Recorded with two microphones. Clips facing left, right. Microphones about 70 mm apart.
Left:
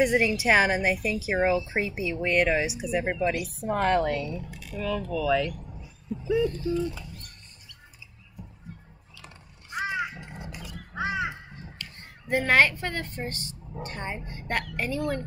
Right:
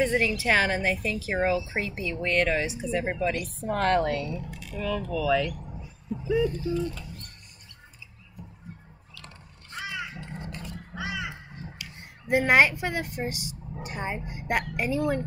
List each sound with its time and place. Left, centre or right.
0.0 s speech: centre
6.8 s speech: centre
9.1 s crow: centre
10.3 s dog: centre
11.0 s crow: left
11.8 s a woman's voice: centre